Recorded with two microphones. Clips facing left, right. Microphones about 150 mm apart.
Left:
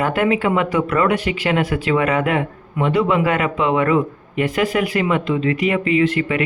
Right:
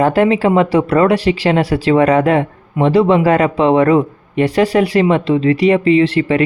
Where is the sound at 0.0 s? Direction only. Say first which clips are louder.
Right 6 dB; 35° right (ahead or behind).